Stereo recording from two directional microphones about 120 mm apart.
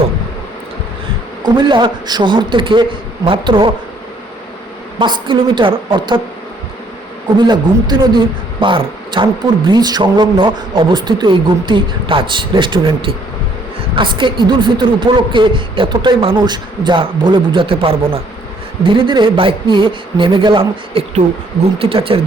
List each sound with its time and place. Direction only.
1.5 s a man's voice: 40° right (ahead or behind)
4.9 s speech: 40° right (ahead or behind)
7.3 s a man's voice: 40° right (ahead or behind)